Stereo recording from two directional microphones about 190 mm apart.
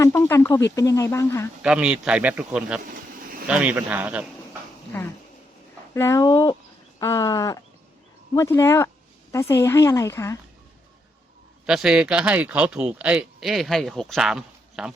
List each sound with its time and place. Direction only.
0.0 s speech: 15° left (ahead or behind)
1.6 s speech: 5° right (ahead or behind)
4.9 s speech: 10° left (ahead or behind)
11.6 s speech: 5° right (ahead or behind)